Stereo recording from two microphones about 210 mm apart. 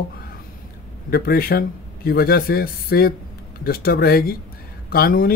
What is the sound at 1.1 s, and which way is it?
Speech, 45° left (ahead or behind).